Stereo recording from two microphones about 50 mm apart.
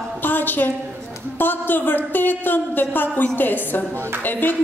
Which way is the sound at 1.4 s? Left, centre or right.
Left.